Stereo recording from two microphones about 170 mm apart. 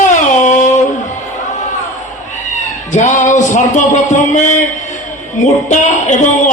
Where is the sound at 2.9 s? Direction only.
45° left (ahead or behind).